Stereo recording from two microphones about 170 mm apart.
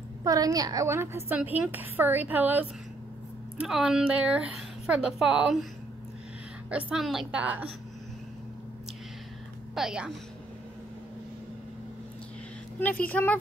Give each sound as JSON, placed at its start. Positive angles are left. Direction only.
{"t": 0.2, "sound": "a woman's voice", "side_deg": -20}
{"t": 6.7, "sound": "a woman's voice", "side_deg": -5}
{"t": 9.8, "sound": "a woman's voice", "side_deg": 0}
{"t": 13.0, "sound": "speech", "side_deg": 10}